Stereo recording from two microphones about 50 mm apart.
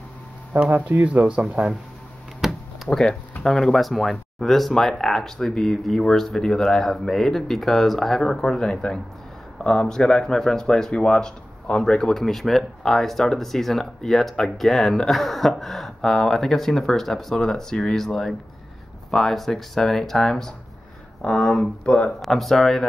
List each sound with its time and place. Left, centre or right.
0.7 s speech: right
1.2 s speech: right
2.4 s a sound: centre
2.9 s speech: centre
22.2 s speech: centre